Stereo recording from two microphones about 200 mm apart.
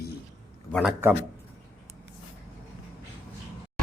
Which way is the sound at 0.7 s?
Centre (ahead or behind).